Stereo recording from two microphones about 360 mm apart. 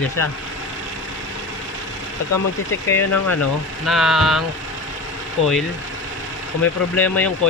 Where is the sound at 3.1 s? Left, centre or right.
Left.